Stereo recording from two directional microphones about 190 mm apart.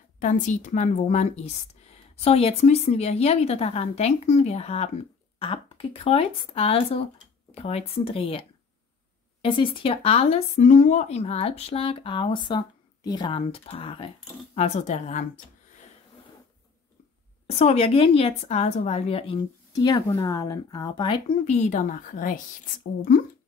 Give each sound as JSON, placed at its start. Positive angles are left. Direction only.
{"t": 0.2, "sound": "a woman's voice", "side_deg": 40}
{"t": 9.8, "sound": "a woman's voice", "side_deg": 30}
{"t": 17.5, "sound": "a woman's voice", "side_deg": 30}